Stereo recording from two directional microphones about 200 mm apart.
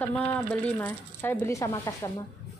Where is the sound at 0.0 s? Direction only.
10° left (ahead or behind).